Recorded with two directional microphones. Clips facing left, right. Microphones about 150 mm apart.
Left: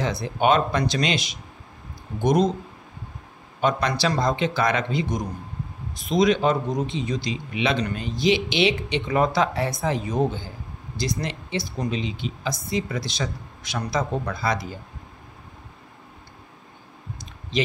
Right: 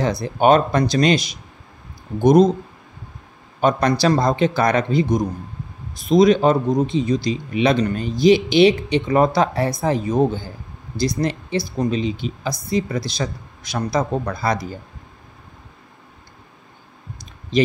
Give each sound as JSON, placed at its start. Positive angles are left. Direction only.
{"t": 0.0, "sound": "a man's voice", "side_deg": -40}
{"t": 3.6, "sound": "a man's voice", "side_deg": -40}